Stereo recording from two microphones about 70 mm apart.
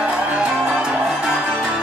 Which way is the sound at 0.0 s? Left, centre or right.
Centre.